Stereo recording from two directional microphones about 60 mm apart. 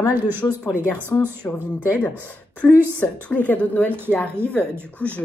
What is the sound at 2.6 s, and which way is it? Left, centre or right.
Speech, left.